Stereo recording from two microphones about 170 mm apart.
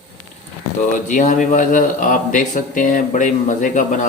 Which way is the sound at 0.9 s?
50° left (ahead or behind).